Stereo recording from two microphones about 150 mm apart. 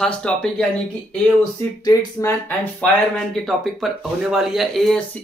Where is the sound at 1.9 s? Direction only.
20° left (ahead or behind).